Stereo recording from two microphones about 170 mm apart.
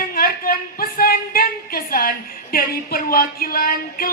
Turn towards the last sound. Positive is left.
turn(degrees=55)  # may be behind; listen again after turning